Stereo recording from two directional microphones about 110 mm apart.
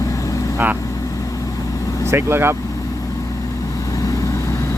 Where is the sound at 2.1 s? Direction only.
20° right (ahead or behind).